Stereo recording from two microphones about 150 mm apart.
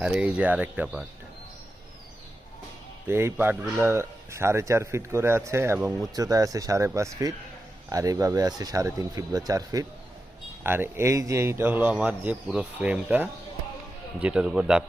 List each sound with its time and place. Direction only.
0.0 s a man's voice: 5° right (ahead or behind)
3.1 s a man's voice: 15° right (ahead or behind)